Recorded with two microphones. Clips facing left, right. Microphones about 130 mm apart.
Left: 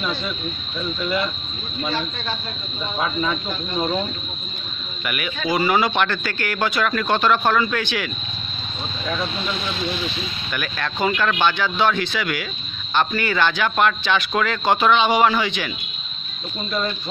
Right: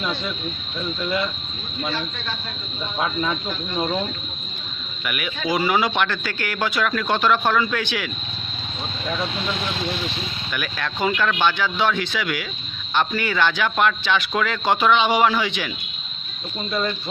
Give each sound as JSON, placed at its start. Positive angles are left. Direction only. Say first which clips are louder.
{"t": 0.0, "sound": "speech", "louder": "even", "side_deg": -20}
{"t": 3.4, "sound": "speech", "louder": "left 1 dB", "side_deg": 15}
{"t": 5.0, "sound": "speech", "louder": "left 1 dB", "side_deg": -5}
{"t": 10.5, "sound": "speech", "louder": "left 1 dB", "side_deg": -5}